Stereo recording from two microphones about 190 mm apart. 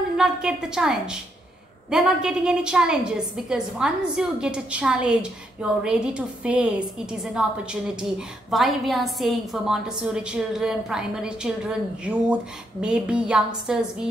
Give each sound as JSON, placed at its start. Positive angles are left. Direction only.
{"t": 0.2, "sound": "a woman's voice", "side_deg": -5}